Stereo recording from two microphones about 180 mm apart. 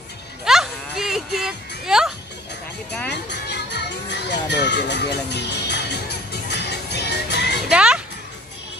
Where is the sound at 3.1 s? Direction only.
70° left (ahead or behind).